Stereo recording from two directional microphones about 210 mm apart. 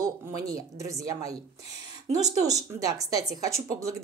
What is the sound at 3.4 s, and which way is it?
Speech, 15° right (ahead or behind).